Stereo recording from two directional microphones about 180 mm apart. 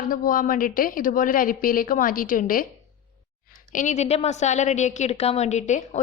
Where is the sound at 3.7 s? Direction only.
45° left (ahead or behind).